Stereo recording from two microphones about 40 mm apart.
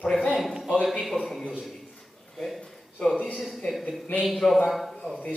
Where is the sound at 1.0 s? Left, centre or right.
Centre.